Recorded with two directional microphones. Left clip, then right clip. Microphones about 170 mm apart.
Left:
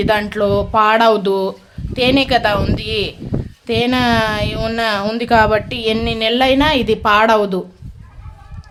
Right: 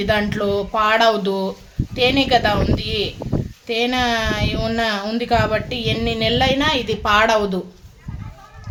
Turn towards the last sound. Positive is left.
turn(degrees=40)  # may be behind; listen again after turning